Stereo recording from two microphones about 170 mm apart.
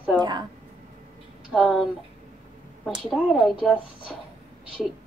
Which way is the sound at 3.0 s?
Centre (ahead or behind).